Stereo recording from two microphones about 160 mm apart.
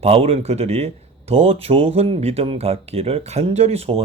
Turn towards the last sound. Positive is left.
turn(degrees=-40)  # may be behind; listen again after turning